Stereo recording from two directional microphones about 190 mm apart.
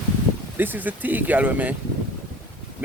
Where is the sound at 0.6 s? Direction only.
10° right (ahead or behind).